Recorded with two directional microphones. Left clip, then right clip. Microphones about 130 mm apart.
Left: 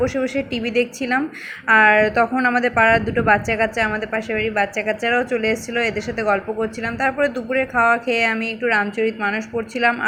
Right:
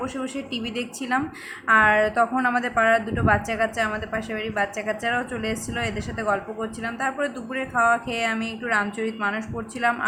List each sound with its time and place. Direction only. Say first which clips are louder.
0.0 s a woman's voice: left 10 dB; 25° left (ahead or behind)